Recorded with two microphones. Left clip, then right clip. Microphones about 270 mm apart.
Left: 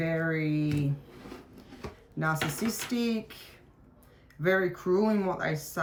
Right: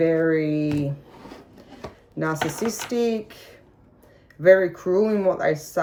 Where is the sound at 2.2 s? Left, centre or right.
Centre.